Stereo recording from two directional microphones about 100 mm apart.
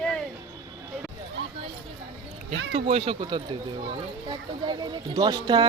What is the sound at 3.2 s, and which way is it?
Speech, 45° right (ahead or behind).